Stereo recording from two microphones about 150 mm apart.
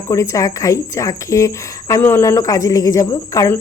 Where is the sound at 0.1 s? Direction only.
20° left (ahead or behind).